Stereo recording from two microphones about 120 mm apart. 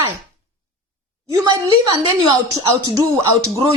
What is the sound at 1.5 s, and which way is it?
Speech, 35° right (ahead or behind).